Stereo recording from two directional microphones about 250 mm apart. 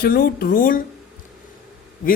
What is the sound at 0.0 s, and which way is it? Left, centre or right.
Speech, left.